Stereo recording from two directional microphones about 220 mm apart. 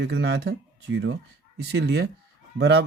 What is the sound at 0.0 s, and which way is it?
Speech, 50° right (ahead or behind).